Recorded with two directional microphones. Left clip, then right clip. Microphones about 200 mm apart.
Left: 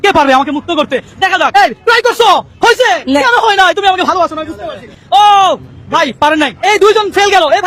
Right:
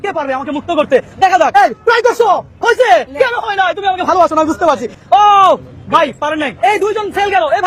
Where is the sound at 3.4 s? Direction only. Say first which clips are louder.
Left 6 dB; 35° left (ahead or behind).